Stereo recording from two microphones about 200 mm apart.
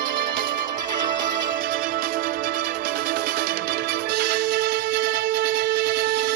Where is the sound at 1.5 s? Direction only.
45° right (ahead or behind).